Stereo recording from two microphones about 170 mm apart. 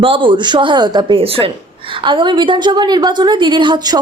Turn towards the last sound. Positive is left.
turn(degrees=-25)  # may be behind; listen again after turning